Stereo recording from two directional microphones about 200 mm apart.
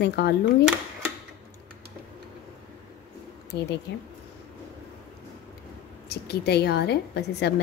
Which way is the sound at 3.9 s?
60° left (ahead or behind).